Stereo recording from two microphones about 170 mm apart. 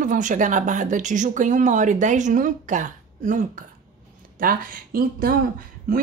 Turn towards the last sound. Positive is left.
turn(degrees=-55)  # may be behind; listen again after turning